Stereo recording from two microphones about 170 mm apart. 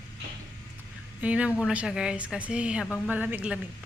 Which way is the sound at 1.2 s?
5° right (ahead or behind).